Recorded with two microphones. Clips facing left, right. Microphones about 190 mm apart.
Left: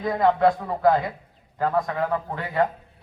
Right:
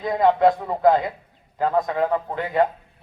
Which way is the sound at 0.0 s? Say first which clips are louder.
Right 2 dB; 20° right (ahead or behind).